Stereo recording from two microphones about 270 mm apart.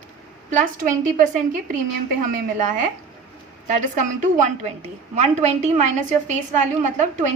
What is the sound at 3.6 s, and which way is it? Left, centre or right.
A woman's voice, right.